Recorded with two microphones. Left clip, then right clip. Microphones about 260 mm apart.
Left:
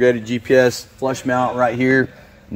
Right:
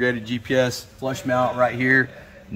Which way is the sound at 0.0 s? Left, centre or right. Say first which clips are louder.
Left 7 dB; left.